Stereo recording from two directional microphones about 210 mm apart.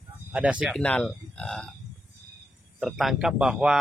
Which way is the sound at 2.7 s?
Centre (ahead or behind).